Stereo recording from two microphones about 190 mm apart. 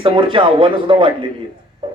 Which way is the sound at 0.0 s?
25° right (ahead or behind).